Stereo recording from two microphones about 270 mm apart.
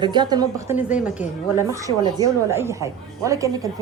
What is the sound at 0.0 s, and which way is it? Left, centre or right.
A woman's voice, centre.